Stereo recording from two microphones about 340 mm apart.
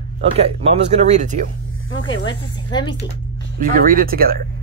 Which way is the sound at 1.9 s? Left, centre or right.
Left.